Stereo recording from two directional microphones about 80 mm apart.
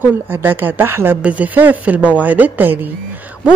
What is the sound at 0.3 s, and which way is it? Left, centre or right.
A woman's voice, right.